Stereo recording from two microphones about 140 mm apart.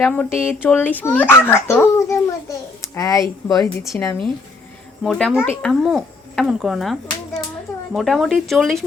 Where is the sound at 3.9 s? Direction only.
10° left (ahead or behind).